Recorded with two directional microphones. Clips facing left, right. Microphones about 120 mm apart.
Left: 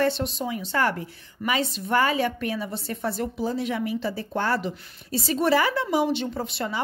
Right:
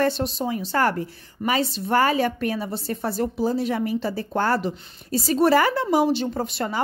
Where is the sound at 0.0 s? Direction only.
40° right (ahead or behind).